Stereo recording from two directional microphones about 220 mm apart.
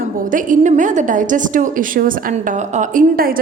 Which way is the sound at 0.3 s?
35° right (ahead or behind).